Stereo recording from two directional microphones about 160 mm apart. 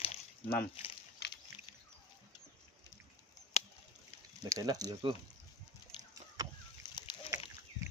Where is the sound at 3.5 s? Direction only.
45° left (ahead or behind).